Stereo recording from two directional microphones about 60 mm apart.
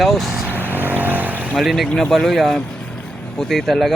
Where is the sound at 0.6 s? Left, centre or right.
Right.